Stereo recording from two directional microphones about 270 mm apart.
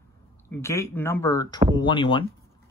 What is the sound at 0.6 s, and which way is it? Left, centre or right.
Speech, centre.